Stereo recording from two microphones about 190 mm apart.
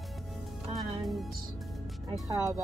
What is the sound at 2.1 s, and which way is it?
Speech, 20° right (ahead or behind).